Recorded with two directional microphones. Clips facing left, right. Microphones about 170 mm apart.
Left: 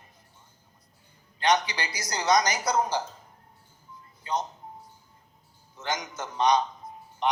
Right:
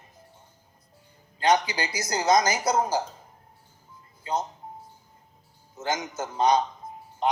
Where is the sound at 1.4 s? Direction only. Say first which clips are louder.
Right 2 dB; 25° right (ahead or behind).